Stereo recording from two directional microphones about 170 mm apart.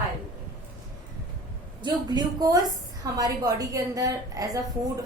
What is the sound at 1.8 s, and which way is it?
A woman's voice, 25° right (ahead or behind).